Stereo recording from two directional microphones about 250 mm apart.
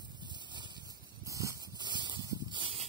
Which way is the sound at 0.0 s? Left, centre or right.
Centre.